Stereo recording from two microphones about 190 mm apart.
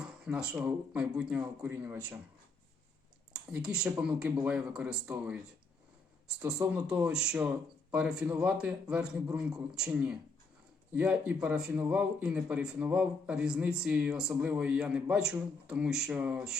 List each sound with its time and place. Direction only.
0.0 s speech: 5° right (ahead or behind)
3.3 s a man's voice: 5° right (ahead or behind)
6.7 s a man's voice: 5° right (ahead or behind)